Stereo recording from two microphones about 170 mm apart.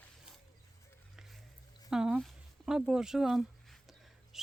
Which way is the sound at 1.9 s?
5° right (ahead or behind).